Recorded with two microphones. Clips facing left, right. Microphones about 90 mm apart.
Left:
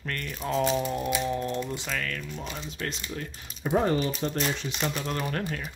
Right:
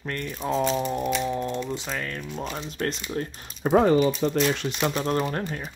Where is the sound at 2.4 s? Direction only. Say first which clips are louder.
Right 5 dB; 40° right (ahead or behind).